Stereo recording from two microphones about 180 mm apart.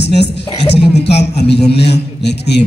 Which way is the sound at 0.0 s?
70° left (ahead or behind).